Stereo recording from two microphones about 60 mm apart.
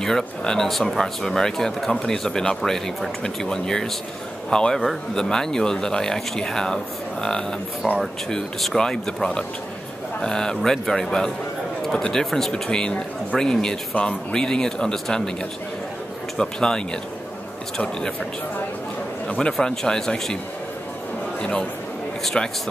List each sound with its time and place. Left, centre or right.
0.0 s speech: centre
16.3 s speech: centre
19.6 s speech: centre
21.4 s a man's voice: centre